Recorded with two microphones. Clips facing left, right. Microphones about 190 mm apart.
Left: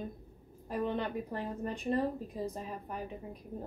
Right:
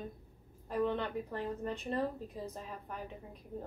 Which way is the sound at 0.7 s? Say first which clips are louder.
Even; 10° left (ahead or behind).